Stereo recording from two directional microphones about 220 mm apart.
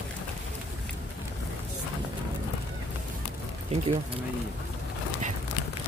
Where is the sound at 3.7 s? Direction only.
30° right (ahead or behind).